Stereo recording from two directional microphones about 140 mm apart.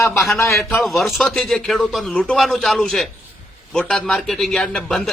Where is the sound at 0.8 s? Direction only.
Centre (ahead or behind).